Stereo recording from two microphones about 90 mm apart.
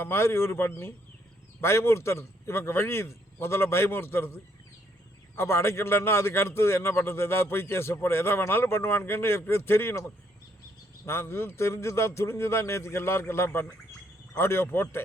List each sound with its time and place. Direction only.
0.0 s a man's voice: 25° left (ahead or behind)
5.4 s a man's voice: 30° left (ahead or behind)